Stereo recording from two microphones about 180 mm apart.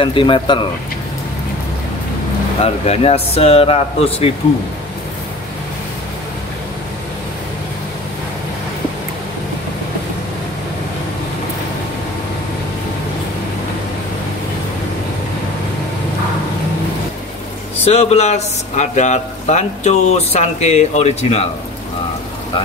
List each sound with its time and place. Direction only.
0.0 s speech: 30° left (ahead or behind)
2.6 s speech: 35° left (ahead or behind)
17.8 s speech: 35° left (ahead or behind)